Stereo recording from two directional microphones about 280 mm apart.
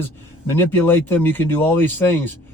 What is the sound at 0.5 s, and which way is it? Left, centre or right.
Speech, centre.